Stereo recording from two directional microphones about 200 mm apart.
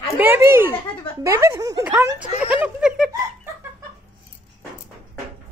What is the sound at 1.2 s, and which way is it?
Speech, 15° right (ahead or behind).